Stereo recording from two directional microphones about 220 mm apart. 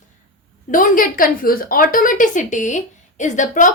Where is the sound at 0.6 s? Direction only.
35° left (ahead or behind).